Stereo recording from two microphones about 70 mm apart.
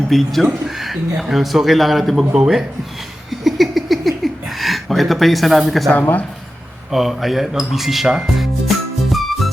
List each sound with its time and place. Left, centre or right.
0.1 s speech: centre
3.2 s a sound: centre
5.9 s speech: left
6.9 s music: centre